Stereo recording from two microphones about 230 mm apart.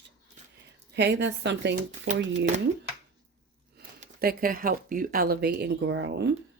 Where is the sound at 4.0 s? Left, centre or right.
Right.